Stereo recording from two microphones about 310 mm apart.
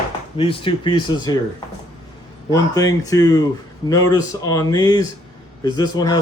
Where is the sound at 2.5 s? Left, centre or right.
Centre.